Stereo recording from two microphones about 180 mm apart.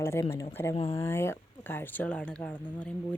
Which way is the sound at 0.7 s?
35° left (ahead or behind).